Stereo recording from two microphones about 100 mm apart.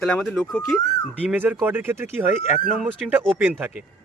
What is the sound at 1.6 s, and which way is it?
Speech, 20° right (ahead or behind).